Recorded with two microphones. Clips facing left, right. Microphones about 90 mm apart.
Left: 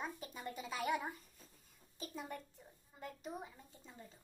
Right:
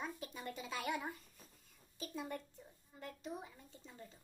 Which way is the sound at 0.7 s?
30° left (ahead or behind).